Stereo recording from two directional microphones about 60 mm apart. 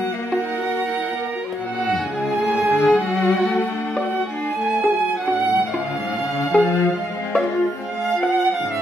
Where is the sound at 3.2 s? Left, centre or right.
Left.